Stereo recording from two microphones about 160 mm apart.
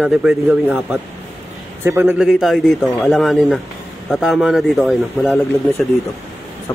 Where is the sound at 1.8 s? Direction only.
15° right (ahead or behind).